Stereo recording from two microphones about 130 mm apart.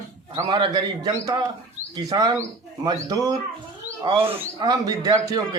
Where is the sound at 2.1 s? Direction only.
30° right (ahead or behind).